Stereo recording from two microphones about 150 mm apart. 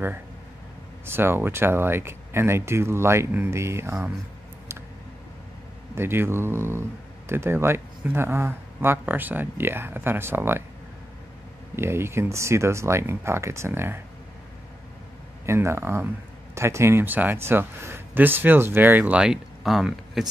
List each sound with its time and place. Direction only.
1.0 s speech: 15° right (ahead or behind)
5.9 s speech: 15° right (ahead or behind)
11.7 s speech: 15° right (ahead or behind)
15.4 s speech: 20° right (ahead or behind)